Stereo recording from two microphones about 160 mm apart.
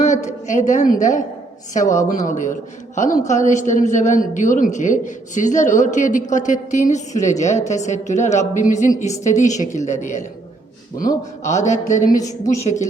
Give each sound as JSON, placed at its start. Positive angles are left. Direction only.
{"t": 0.0, "sound": "a man's voice", "side_deg": 50}
{"t": 11.4, "sound": "a man's voice", "side_deg": 50}